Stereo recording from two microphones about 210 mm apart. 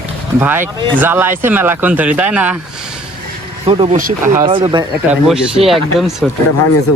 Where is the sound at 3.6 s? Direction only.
25° right (ahead or behind).